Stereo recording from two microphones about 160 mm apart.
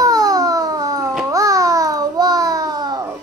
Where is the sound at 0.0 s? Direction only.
20° right (ahead or behind).